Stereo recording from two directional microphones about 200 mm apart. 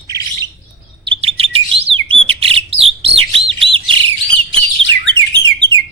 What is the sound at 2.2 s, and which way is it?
Bird, 30° right (ahead or behind).